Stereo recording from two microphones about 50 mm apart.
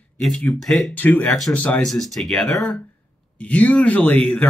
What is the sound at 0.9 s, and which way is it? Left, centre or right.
Speech, left.